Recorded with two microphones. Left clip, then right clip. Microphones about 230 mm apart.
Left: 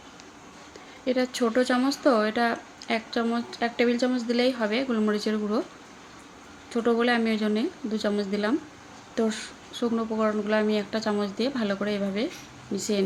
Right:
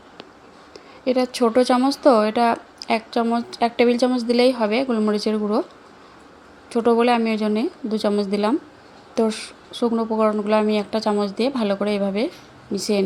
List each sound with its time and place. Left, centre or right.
1.0 s speech: right
6.7 s speech: right